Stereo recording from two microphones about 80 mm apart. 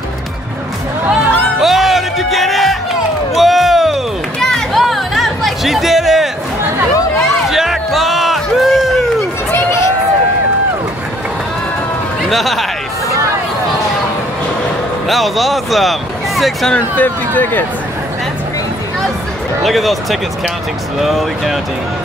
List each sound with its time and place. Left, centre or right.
1.6 s music: centre
3.3 s a sound: centre
7.2 s music: centre
9.5 s a sound: left
12.3 s speech: centre
15.0 s speech: centre
16.7 s speech: centre
19.6 s speech: centre